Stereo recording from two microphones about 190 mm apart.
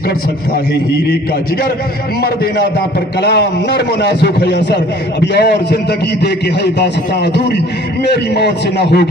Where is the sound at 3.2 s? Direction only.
65° left (ahead or behind).